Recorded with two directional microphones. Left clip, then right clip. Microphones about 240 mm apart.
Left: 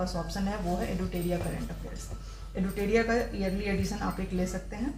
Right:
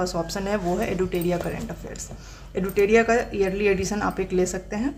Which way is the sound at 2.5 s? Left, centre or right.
Right.